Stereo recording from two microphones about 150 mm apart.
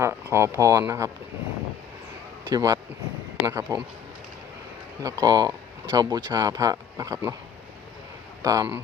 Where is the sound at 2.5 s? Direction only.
25° right (ahead or behind).